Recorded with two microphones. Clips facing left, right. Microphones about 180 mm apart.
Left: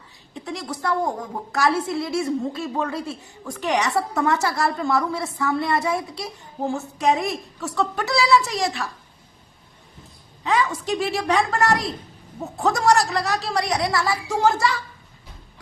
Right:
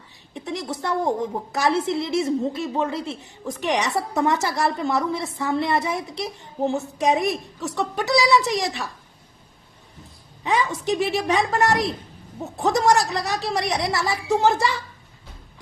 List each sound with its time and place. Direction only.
0.3 s a woman's voice: 20° right (ahead or behind)
10.4 s a woman's voice: 20° right (ahead or behind)